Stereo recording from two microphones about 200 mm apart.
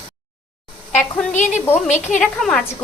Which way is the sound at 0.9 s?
35° left (ahead or behind).